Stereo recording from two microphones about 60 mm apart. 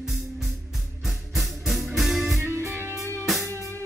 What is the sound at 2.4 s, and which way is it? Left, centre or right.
Music, right.